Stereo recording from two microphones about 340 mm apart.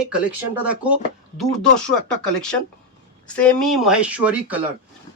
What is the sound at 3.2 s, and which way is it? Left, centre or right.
Speech, centre.